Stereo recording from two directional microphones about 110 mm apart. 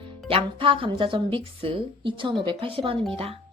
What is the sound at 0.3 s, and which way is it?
A woman's voice, 55° right (ahead or behind).